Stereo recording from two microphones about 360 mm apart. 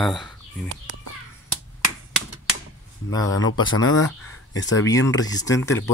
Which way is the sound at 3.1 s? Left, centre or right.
Centre.